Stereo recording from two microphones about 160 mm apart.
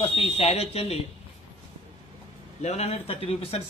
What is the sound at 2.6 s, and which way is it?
Speech, 40° left (ahead or behind).